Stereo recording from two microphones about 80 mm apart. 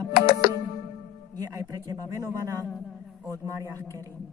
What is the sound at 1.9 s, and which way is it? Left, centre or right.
Speech, right.